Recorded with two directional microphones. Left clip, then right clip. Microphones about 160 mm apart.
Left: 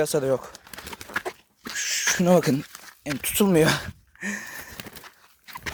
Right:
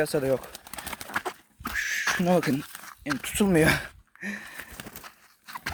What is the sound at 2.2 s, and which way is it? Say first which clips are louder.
Speech: left 6 dB; 40° left (ahead or behind).